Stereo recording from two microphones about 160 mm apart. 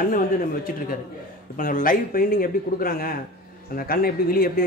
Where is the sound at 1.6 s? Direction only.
60° left (ahead or behind).